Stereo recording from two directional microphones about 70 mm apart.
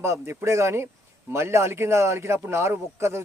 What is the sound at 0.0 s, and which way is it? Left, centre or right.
A man's voice, right.